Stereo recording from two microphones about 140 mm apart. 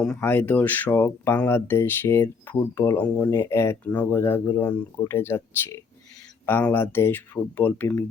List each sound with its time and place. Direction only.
0.2 s speech: 15° left (ahead or behind)